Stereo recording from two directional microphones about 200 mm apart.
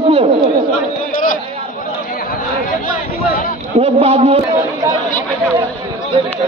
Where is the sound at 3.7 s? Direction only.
30° right (ahead or behind).